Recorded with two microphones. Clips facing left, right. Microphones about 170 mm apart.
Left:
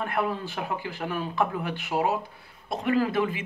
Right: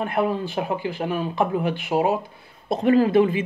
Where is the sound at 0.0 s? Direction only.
20° right (ahead or behind).